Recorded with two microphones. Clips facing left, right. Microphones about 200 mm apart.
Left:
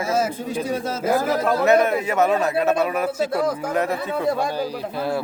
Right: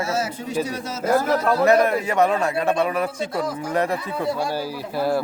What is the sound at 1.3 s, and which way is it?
A man's voice, centre (ahead or behind).